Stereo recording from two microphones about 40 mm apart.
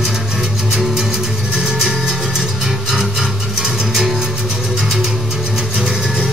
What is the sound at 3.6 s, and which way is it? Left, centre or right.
Music, centre.